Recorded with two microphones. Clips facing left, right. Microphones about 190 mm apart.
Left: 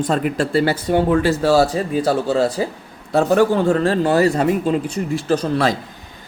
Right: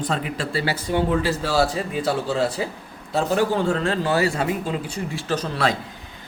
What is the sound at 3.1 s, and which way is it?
Speech, 50° left (ahead or behind).